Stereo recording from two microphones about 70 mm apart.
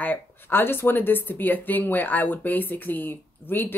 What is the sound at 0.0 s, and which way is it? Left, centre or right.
Speech, left.